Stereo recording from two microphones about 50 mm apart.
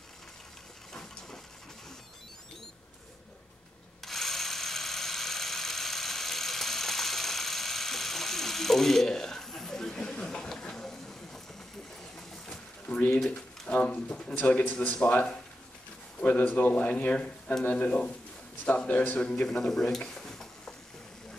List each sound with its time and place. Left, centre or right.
4.0 s a sound: centre
13.2 s pigeon: left
14.2 s speech: left
19.1 s speech: left
19.4 s stir: centre